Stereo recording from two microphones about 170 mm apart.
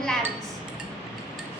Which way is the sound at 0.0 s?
5° left (ahead or behind).